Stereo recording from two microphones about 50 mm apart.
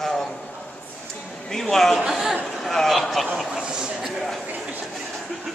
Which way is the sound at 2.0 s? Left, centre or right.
Centre.